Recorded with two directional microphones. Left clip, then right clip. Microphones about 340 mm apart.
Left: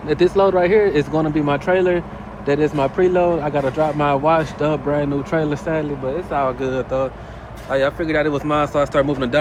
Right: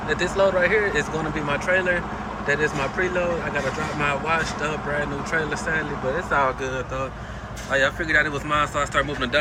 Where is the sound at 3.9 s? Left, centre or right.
Centre.